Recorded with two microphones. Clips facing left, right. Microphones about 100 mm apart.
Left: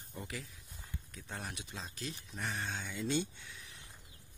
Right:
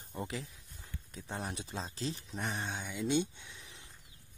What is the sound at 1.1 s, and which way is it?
Speech, 25° right (ahead or behind).